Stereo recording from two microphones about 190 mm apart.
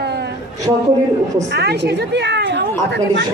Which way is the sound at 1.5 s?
60° right (ahead or behind).